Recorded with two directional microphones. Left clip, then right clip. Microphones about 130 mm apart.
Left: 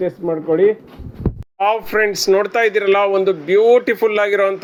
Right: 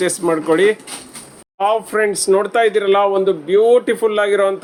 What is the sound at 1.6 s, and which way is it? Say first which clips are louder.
Speech: even; 10° left (ahead or behind).